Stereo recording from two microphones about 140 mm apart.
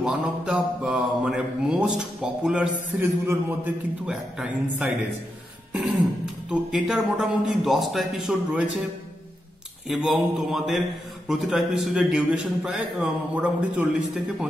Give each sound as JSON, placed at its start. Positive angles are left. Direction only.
{"t": 0.0, "sound": "a man's voice", "side_deg": -5}
{"t": 3.0, "sound": "a man's voice", "side_deg": -15}
{"t": 4.0, "sound": "a man's voice", "side_deg": -5}
{"t": 6.5, "sound": "a man's voice", "side_deg": -5}
{"t": 9.8, "sound": "a man's voice", "side_deg": 0}